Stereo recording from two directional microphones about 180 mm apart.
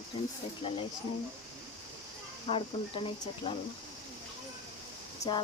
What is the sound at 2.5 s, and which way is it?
Speech, 30° left (ahead or behind).